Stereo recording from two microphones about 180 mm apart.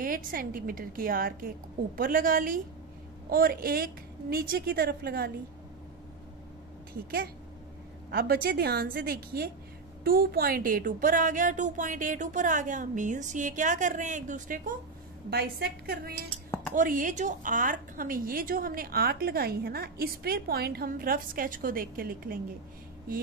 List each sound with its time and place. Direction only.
0.0 s a woman's voice: 50° right (ahead or behind)
8.1 s a woman's voice: 60° right (ahead or behind)
15.2 s a woman's voice: 60° right (ahead or behind)
16.4 s a sound: 15° left (ahead or behind)
16.7 s a woman's voice: 45° right (ahead or behind)